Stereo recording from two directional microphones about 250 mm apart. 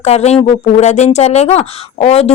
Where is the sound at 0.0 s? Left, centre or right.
Left.